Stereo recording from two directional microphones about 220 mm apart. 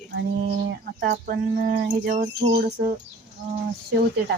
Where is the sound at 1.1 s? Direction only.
40° right (ahead or behind).